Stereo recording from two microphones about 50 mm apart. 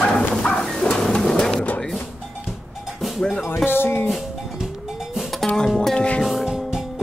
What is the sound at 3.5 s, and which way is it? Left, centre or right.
Speech, left.